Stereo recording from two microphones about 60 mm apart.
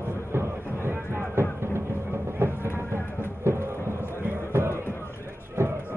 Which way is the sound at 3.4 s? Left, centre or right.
Right.